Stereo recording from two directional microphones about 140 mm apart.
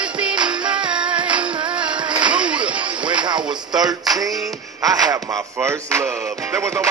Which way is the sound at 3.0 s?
35° right (ahead or behind).